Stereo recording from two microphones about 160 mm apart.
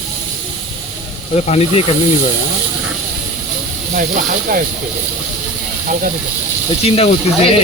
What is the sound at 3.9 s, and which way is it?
Speech, 60° right (ahead or behind).